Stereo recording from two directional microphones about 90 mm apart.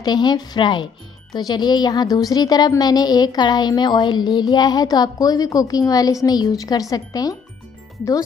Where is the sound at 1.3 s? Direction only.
50° left (ahead or behind).